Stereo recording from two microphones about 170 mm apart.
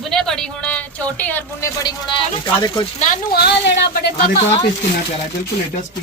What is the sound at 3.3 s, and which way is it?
Speech, 80° left.